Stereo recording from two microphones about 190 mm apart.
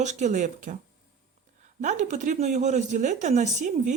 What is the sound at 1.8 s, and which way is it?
Speech, 40° right (ahead or behind).